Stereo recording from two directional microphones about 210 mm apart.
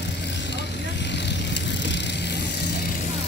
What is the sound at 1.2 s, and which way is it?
Vehicle, 55° left (ahead or behind).